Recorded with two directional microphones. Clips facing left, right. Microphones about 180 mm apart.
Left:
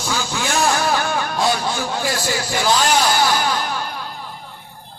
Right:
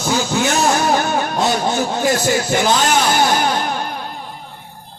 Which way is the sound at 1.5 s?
45° right (ahead or behind).